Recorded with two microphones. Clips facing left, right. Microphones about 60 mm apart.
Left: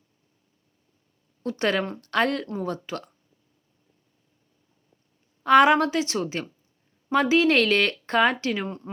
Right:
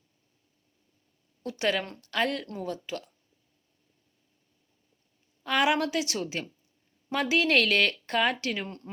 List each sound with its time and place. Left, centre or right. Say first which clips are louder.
1.4 s speech: left 4 dB; left
5.4 s speech: left 9 dB; left; by 8.9 s centre